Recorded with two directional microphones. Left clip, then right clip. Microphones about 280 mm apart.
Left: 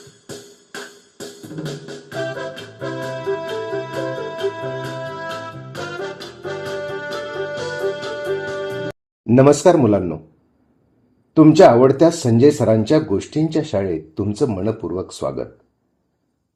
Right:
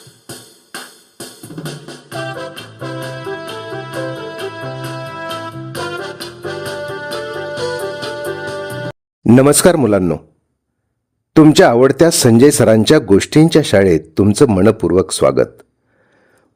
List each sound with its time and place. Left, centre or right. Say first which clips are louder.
0.3 s music: right 3 dB; right
11.3 s speech: right 2 dB; right